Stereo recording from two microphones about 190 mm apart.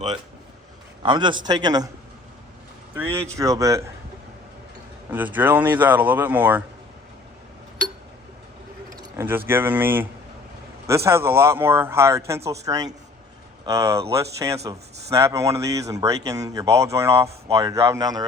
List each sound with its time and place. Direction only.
1.0 s a man's voice: 25° right (ahead or behind)
2.9 s a man's voice: 10° right (ahead or behind)
5.1 s a man's voice: 10° right (ahead or behind)
9.0 s a man's voice: 10° right (ahead or behind)